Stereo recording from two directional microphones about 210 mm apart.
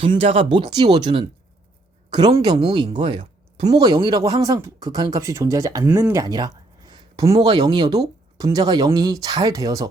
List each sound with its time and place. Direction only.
0.0 s speech: 25° right (ahead or behind)